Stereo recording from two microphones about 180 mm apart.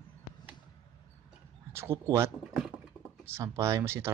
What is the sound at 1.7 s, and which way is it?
Speech, 15° right (ahead or behind).